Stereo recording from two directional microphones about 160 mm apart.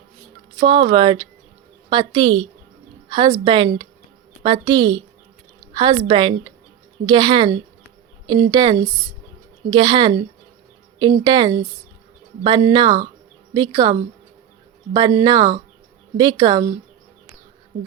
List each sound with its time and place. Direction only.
0.6 s a woman's voice: 30° right (ahead or behind)
11.2 s a woman's voice: 30° right (ahead or behind)
14.9 s speech: 25° right (ahead or behind)